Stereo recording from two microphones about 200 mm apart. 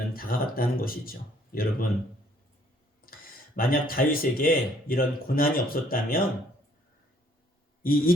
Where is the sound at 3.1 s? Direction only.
45° left (ahead or behind).